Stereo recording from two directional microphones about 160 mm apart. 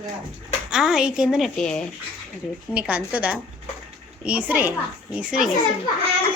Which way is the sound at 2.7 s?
10° right (ahead or behind).